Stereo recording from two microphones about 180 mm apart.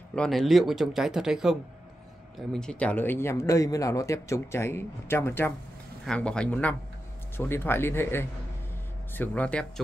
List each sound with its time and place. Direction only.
0.1 s speech: 5° left (ahead or behind)